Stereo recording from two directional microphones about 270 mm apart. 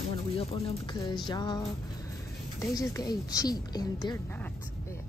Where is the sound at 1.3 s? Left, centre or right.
Centre.